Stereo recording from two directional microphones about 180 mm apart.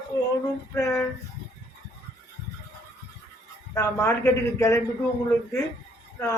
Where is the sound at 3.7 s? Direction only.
15° left (ahead or behind).